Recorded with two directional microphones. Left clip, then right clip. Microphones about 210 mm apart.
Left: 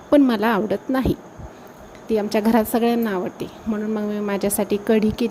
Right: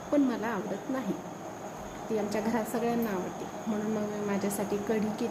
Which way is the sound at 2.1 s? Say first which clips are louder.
Left 12 dB; 40° left (ahead or behind).